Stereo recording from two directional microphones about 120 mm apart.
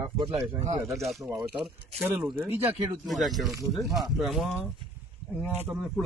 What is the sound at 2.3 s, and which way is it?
Speech, 20° right (ahead or behind).